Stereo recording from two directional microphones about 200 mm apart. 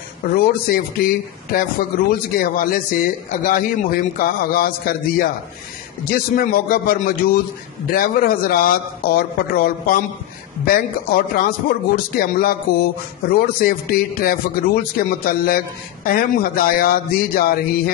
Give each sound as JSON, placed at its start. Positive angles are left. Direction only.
{"t": 0.3, "sound": "speech", "side_deg": 45}